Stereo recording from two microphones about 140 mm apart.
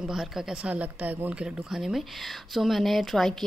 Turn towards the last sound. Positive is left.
turn(degrees=0)  # may be behind; listen again after turning